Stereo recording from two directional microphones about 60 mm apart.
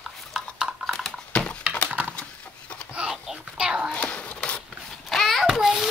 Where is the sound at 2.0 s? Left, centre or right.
Right.